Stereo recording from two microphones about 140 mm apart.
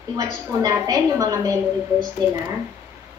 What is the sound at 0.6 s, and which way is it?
A woman's voice, 25° right (ahead or behind).